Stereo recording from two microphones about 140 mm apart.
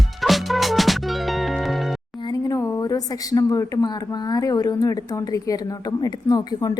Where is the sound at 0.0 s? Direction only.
Centre (ahead or behind).